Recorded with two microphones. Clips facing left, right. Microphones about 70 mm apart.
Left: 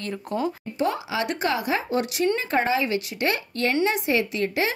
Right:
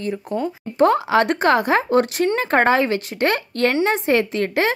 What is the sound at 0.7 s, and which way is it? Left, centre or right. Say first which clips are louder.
A woman's voice: right 11 dB; right.